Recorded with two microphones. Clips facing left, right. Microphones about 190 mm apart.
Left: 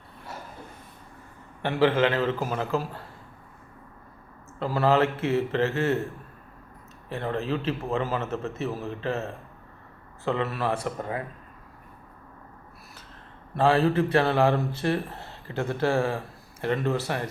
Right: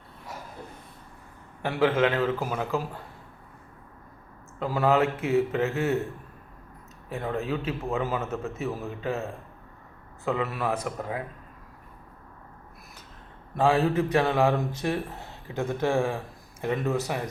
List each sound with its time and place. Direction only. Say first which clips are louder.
1.6 s speech: left 1 dB; 5° right (ahead or behind)
4.6 s a man's voice: left 1 dB; 10° right (ahead or behind)
7.1 s a man's voice: left 1 dB; 5° right (ahead or behind)
10.2 s speech: left 1 dB; 5° right (ahead or behind)
13.6 s a man's voice: left 1 dB; 10° right (ahead or behind)